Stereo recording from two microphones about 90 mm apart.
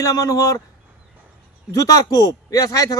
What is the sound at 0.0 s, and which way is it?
Speech, 40° left (ahead or behind).